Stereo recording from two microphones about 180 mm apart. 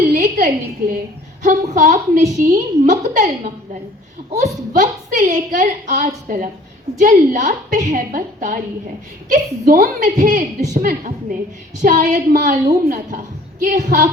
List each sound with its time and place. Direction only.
0.1 s a sound: 45° right (ahead or behind)
1.4 s a woman's voice: 45° right (ahead or behind)
4.7 s a woman's voice: 45° right (ahead or behind)